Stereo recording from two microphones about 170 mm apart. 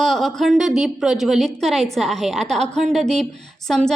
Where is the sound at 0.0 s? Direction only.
Centre (ahead or behind).